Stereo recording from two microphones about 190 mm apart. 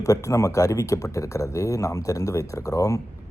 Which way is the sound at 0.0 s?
15° left (ahead or behind).